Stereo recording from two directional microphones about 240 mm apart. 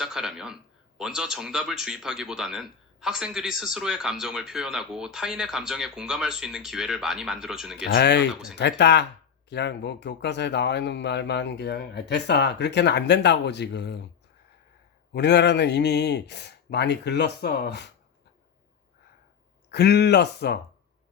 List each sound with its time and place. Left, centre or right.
0.0 s speech: centre
7.9 s speech: left
8.3 s speech: centre
8.5 s speech: left
15.1 s speech: left
19.7 s speech: left